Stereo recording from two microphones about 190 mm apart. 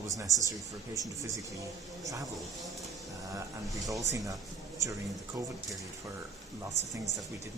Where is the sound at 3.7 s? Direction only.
15° right (ahead or behind).